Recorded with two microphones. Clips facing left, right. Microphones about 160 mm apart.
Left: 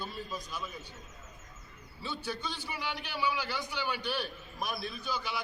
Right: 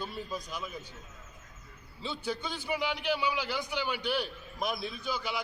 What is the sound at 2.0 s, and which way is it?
A man's voice, 20° right (ahead or behind).